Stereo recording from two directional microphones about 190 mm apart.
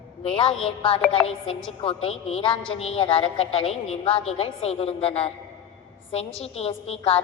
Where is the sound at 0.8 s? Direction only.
30° left (ahead or behind).